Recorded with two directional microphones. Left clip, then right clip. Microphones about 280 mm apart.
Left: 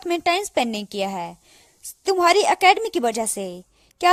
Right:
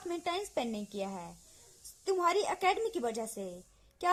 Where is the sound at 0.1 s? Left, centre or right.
Left.